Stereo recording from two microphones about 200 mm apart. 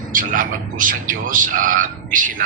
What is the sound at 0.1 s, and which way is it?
A man's voice, 40° right (ahead or behind).